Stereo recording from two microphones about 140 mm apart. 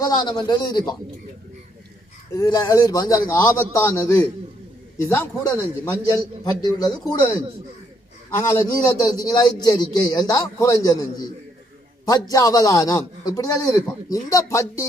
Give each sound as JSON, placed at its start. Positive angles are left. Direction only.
{"t": 0.0, "sound": "a man's voice", "side_deg": 30}
{"t": 2.3, "sound": "a man's voice", "side_deg": 25}
{"t": 6.4, "sound": "a man's voice", "side_deg": 30}
{"t": 8.5, "sound": "a man's voice", "side_deg": 25}